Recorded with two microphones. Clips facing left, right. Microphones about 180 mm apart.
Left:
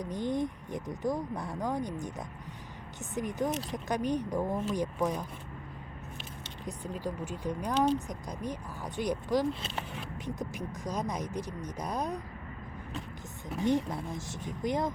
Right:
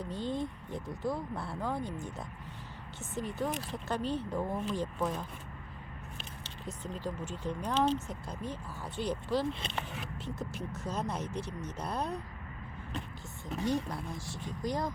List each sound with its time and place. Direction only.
0.0 s speech: 15° left (ahead or behind)
6.7 s speech: 10° left (ahead or behind)
13.6 s speech: 20° left (ahead or behind)